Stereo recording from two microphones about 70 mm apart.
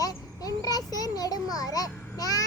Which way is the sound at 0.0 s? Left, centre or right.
Left.